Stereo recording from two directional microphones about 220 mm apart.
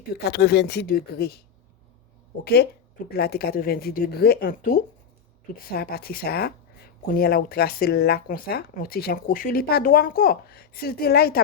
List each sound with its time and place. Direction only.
0.2 s speech: 50° left (ahead or behind)
2.4 s speech: 45° left (ahead or behind)